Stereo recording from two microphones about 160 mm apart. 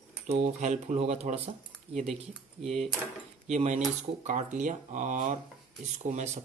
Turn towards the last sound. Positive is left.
turn(degrees=-50)  # may be behind; listen again after turning